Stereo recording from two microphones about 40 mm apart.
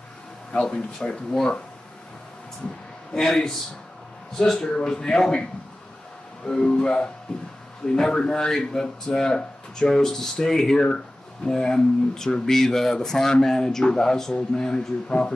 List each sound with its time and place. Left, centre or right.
0.5 s speech: left
0.7 s speech: centre
3.2 s speech: centre
6.4 s speech: left